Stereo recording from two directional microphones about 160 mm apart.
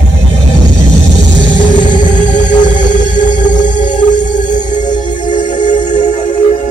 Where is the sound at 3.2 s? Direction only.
50° left (ahead or behind).